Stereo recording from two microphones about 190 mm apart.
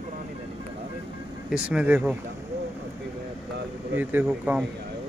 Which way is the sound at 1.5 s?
5° right (ahead or behind).